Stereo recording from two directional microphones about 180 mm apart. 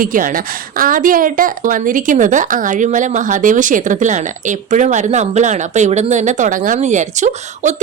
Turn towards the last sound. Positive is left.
turn(degrees=-40)  # may be behind; listen again after turning